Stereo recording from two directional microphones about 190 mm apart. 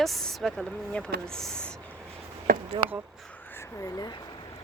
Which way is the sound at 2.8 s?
25° right (ahead or behind).